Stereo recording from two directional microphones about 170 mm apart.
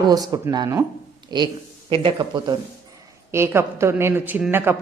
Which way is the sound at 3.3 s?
15° right (ahead or behind).